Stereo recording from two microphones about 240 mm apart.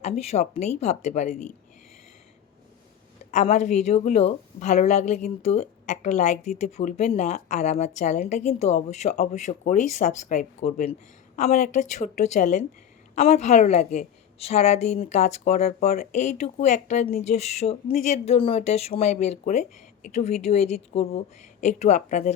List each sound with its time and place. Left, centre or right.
0.0 s a woman's voice: left
3.3 s a woman's voice: left